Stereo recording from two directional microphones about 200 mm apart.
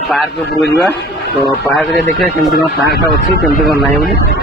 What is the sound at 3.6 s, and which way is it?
Speech, centre (ahead or behind).